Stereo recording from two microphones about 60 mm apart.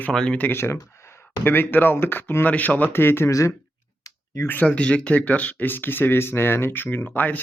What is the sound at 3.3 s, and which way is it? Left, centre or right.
Speech, left.